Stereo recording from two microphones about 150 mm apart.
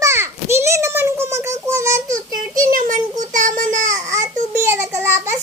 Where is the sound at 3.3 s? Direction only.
60° right (ahead or behind).